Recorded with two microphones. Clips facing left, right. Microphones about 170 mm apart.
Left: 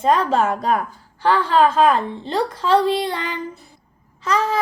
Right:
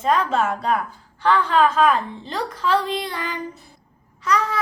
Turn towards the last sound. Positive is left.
turn(degrees=25)  # may be behind; listen again after turning